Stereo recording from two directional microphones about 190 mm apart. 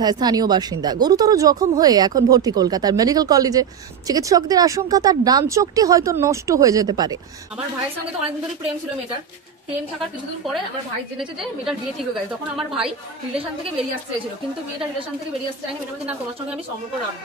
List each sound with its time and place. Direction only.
0.0 s speech: 20° right (ahead or behind)
9.9 s a woman's voice: centre (ahead or behind)
12.5 s a woman's voice: 5° right (ahead or behind)